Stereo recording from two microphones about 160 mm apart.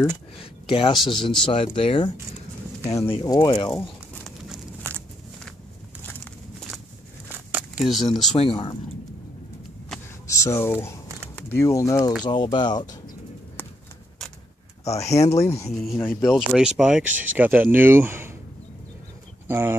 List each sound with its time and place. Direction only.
0.4 s speech: 35° left (ahead or behind)
2.9 s speech: 15° left (ahead or behind)
3.2 s speech: 25° left (ahead or behind)
4.8 s walk: 10° left (ahead or behind)
7.2 s a sound: 10° right (ahead or behind)
8.4 s speech: 35° left (ahead or behind)
10.2 s speech: 20° left (ahead or behind)
12.8 s pigeon: 50° left (ahead or behind)
13.6 s horse: 10° left (ahead or behind)
14.9 s speech: 45° left (ahead or behind)
15.1 s speech: 20° left (ahead or behind)
15.7 s speech: centre (ahead or behind)
19.4 s speech: 15° right (ahead or behind)